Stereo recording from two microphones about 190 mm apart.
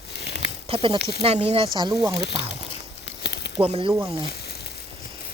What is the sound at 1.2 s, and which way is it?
Speech, 30° right (ahead or behind).